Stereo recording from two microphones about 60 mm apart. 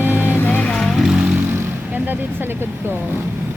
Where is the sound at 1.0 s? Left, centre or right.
Centre.